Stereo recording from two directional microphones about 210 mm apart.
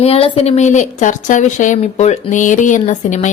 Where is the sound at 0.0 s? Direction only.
30° left (ahead or behind).